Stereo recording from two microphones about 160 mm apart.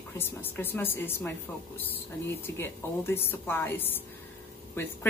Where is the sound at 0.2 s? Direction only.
15° left (ahead or behind).